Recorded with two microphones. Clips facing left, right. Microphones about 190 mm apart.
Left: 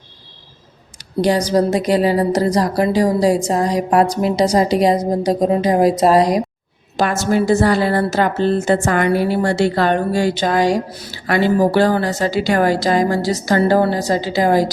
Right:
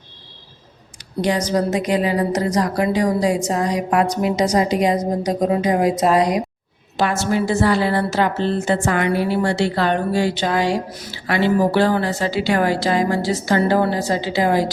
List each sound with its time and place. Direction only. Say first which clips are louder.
1.2 s a woman's voice: left 4 dB; 35° left (ahead or behind)